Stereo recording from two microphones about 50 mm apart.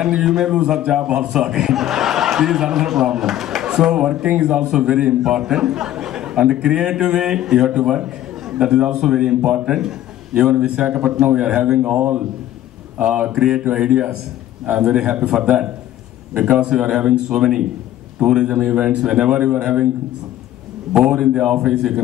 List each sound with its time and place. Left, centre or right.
0.0 s a man's voice: centre
12.0 s a man's voice: right
13.3 s a man's voice: centre
15.2 s a man's voice: centre
16.5 s a man's voice: centre
20.9 s a man's voice: centre